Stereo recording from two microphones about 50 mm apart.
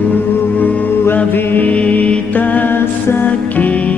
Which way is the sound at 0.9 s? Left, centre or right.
Left.